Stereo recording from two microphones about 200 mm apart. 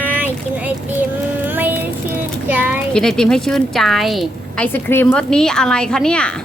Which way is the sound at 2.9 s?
5° left (ahead or behind).